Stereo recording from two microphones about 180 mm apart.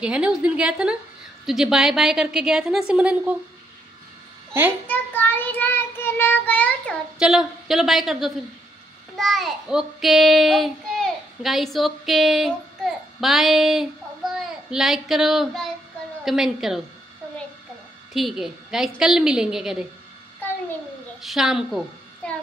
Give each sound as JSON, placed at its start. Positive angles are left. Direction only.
{"t": 0.0, "sound": "a woman's voice", "side_deg": -5}
{"t": 4.8, "sound": "child singing", "side_deg": 10}
{"t": 7.2, "sound": "a woman's voice", "side_deg": -5}
{"t": 9.1, "sound": "child singing", "side_deg": 0}
{"t": 14.3, "sound": "a woman's voice", "side_deg": 0}
{"t": 18.1, "sound": "a woman's voice", "side_deg": 0}
{"t": 21.2, "sound": "a child's voice", "side_deg": 0}